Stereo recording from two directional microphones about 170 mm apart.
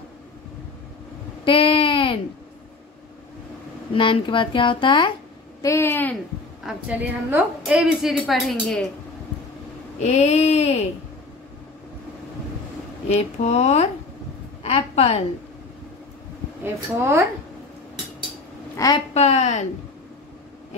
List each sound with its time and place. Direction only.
1.4 s a sound: 30° left (ahead or behind)
3.9 s speech: 30° left (ahead or behind)
5.6 s speech: 15° left (ahead or behind)
6.6 s a woman's voice: 10° right (ahead or behind)
9.9 s a sound: 40° left (ahead or behind)
13.1 s a sound: 40° left (ahead or behind)
14.6 s a woman's voice: 35° left (ahead or behind)
16.6 s a woman's voice: 15° right (ahead or behind)
18.8 s speech: 20° left (ahead or behind)
19.1 s speech: 40° left (ahead or behind)